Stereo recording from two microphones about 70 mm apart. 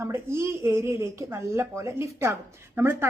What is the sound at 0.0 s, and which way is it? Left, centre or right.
A woman's voice, right.